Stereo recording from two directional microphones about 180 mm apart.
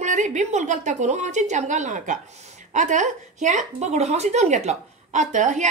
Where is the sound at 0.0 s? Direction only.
40° right (ahead or behind).